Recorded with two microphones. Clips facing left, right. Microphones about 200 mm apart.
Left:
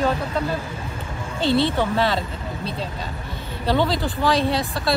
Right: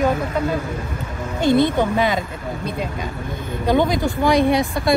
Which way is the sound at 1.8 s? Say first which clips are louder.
Right 2 dB; 15° right (ahead or behind).